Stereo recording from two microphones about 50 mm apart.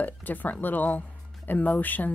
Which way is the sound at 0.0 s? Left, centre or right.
Left.